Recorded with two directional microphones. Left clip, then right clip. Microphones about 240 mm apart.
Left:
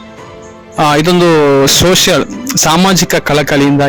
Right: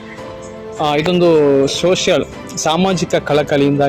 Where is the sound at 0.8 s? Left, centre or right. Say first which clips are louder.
Left 5 dB; left.